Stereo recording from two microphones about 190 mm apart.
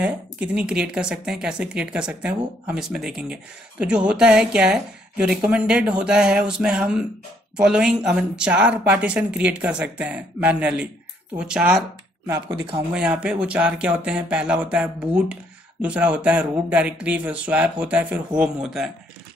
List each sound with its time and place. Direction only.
0.0 s speech: 5° right (ahead or behind)
12.3 s speech: 25° right (ahead or behind)
12.9 s speech: 5° right (ahead or behind)